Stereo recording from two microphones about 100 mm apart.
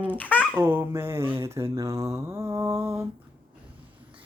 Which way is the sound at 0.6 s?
25° right (ahead or behind).